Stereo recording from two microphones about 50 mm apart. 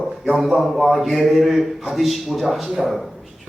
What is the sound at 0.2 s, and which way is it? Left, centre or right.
A man's voice, centre.